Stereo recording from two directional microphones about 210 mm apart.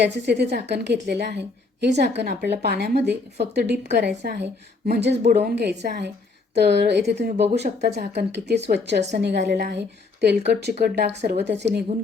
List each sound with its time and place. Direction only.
0.0 s a woman's voice: 55° right (ahead or behind)